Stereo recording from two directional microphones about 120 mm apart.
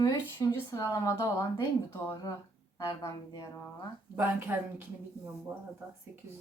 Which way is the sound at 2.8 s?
30° left (ahead or behind).